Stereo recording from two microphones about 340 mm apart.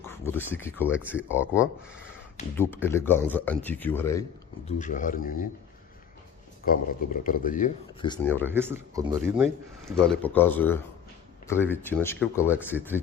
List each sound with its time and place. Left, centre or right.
0.0 s speech: centre
2.6 s speech: centre
4.8 s a man's voice: left
6.7 s a man's voice: left; by 8.4 s centre
8.4 s speech: centre
12.7 s speech: centre